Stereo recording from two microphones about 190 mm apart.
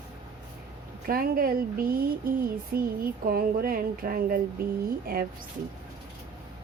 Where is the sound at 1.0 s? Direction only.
50° right (ahead or behind).